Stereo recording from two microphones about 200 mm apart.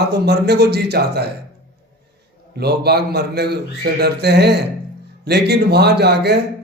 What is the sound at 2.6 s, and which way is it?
A man's voice, 55° right (ahead or behind).